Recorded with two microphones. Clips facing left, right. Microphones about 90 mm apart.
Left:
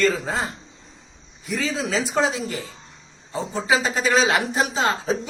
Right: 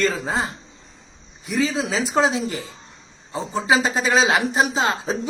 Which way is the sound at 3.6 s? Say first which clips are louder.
Right 2 dB; 25° right (ahead or behind).